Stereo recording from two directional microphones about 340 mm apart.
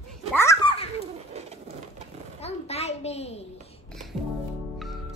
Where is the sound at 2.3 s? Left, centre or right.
Centre.